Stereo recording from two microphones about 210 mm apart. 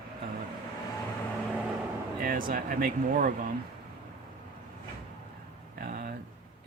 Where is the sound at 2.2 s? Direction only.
40° right (ahead or behind).